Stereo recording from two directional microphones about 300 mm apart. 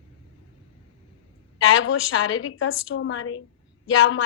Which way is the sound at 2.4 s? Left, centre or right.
Left.